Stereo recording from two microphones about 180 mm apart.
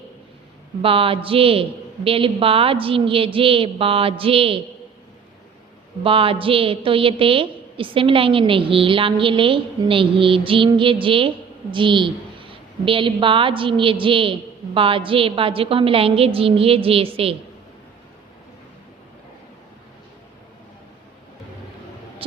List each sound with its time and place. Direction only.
0.8 s a woman's voice: 30° right (ahead or behind)
6.0 s a woman's voice: 30° right (ahead or behind)
22.2 s a sound: 30° right (ahead or behind)